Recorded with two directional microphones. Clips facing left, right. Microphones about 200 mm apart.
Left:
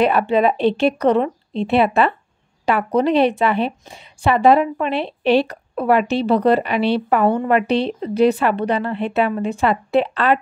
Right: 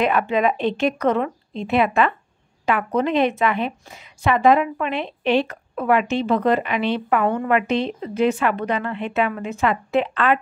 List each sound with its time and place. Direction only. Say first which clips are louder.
0.0 s a woman's voice: left 3 dB; 35° left (ahead or behind)